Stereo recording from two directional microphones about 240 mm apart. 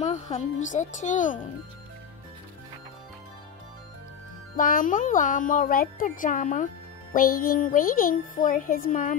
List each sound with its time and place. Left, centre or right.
0.0 s music: left
4.6 s music: left